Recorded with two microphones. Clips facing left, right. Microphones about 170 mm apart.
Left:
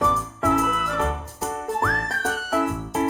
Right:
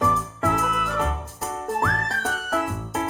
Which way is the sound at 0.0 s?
Centre (ahead or behind).